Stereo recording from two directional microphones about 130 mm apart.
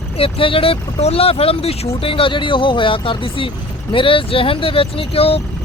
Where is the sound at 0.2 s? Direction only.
45° left (ahead or behind).